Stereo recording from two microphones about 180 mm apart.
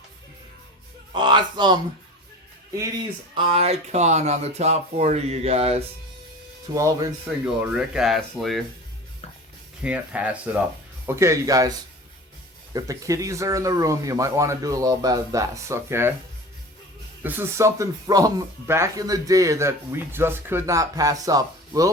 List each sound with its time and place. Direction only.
1.1 s speech: 25° right (ahead or behind)
3.5 s speech: 35° right (ahead or behind)
6.7 s speech: 15° right (ahead or behind)
7.3 s speech: 5° right (ahead or behind)
9.8 s speech: 5° right (ahead or behind)
12.7 s speech: 20° right (ahead or behind)
17.2 s speech: 10° right (ahead or behind)